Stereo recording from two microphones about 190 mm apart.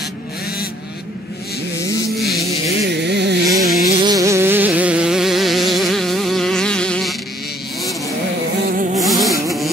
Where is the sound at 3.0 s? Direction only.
65° right (ahead or behind).